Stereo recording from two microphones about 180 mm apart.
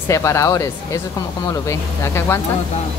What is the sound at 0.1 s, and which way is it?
Speech, 15° left (ahead or behind).